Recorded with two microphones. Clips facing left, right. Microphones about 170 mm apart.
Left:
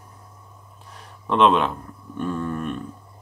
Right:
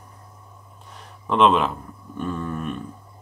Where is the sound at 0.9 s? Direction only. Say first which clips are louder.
Even; centre (ahead or behind).